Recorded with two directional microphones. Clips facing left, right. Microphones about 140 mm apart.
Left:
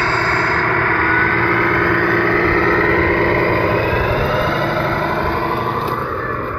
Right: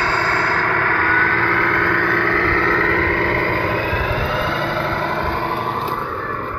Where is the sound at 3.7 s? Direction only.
75° left (ahead or behind).